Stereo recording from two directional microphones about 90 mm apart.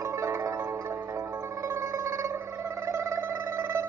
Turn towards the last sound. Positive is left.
turn(degrees=-35)  # may be behind; listen again after turning